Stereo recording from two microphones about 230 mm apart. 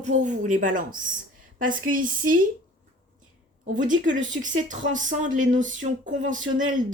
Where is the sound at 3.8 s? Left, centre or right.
Right.